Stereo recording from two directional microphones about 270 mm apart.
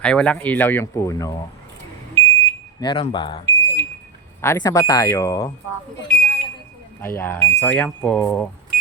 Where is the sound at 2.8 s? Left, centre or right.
Centre.